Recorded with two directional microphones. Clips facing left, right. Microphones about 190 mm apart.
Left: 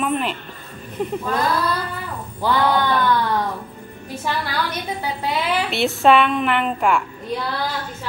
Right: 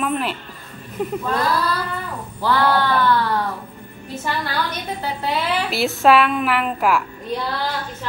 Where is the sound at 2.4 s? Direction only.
15° left (ahead or behind).